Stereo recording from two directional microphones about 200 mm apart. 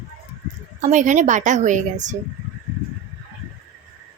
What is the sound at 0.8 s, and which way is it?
A woman's voice, 35° right (ahead or behind).